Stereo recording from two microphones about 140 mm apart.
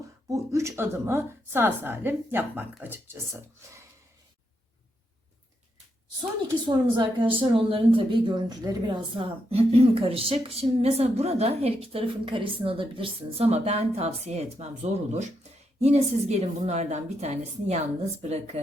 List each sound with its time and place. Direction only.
0.3 s a woman's voice: 20° right (ahead or behind)
6.7 s speech: 30° right (ahead or behind); by 18.6 s 50° right (ahead or behind)